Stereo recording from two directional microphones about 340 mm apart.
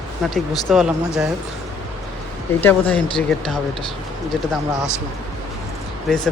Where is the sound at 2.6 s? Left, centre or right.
Centre.